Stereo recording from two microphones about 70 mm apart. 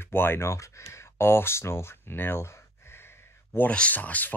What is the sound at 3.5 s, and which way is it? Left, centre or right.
Speech, left.